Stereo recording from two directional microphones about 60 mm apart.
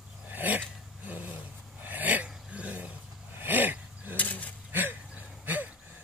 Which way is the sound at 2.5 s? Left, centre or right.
Right.